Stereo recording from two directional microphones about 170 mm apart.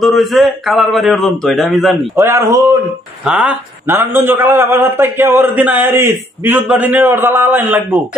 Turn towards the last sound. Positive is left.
turn(degrees=-10)  # may be behind; listen again after turning